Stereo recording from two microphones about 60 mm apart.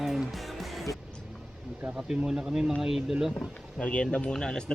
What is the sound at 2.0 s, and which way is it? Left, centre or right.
Speech, centre.